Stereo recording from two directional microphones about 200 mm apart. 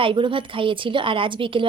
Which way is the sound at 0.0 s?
25° right (ahead or behind).